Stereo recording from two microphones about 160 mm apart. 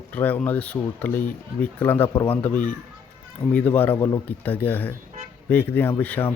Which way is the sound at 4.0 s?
30° left (ahead or behind).